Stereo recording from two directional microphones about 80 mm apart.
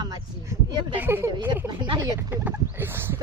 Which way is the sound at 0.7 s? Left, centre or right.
Right.